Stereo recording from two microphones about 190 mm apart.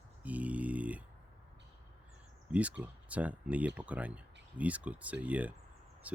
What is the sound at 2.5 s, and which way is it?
Speech, 5° right (ahead or behind).